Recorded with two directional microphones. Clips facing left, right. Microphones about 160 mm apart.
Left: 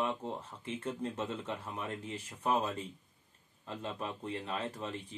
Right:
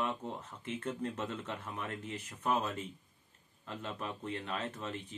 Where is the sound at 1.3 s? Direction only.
30° left (ahead or behind).